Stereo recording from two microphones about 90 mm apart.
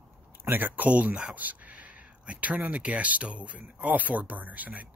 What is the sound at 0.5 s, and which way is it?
Speech, 20° right (ahead or behind).